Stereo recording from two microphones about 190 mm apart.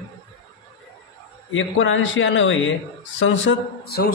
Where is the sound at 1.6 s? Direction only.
85° left.